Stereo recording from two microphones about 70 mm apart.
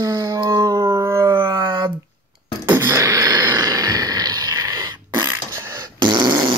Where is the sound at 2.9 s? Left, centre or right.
Right.